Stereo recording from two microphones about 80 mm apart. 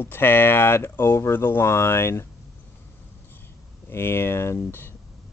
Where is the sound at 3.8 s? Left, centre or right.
Left.